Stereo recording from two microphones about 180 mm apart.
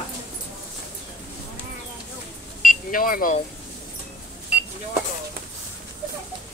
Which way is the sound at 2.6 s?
50° left (ahead or behind).